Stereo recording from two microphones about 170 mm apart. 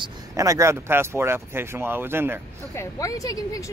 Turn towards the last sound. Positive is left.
turn(degrees=20)  # may be behind; listen again after turning